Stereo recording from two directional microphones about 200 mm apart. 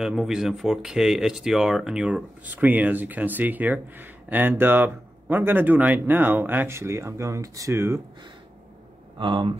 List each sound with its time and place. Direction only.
0.0 s speech: centre (ahead or behind)
9.2 s speech: 25° right (ahead or behind)